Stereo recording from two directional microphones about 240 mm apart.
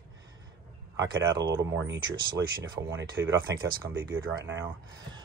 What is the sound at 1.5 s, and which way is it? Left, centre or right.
Speech, right.